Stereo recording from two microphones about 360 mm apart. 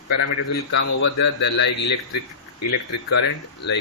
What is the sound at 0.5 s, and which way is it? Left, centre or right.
Speech, left.